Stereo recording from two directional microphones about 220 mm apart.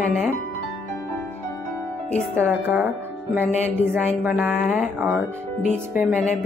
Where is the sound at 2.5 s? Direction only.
10° right (ahead or behind).